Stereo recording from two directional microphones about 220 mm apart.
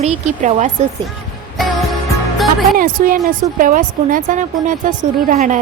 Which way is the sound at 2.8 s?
40° right (ahead or behind).